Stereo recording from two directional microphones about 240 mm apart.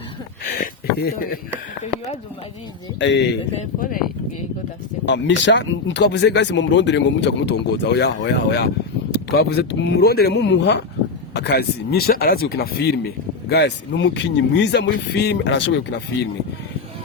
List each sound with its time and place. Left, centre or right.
0.4 s a sound: left
3.0 s speech: left
3.6 s speech: left
5.0 s speech: left